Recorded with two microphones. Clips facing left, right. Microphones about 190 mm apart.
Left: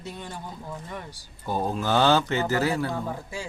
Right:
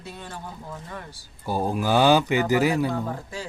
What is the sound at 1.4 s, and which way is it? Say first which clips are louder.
Speech: right 2 dB; 10° right (ahead or behind).